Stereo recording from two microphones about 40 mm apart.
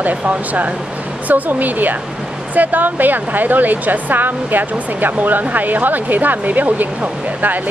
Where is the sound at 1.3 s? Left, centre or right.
Right.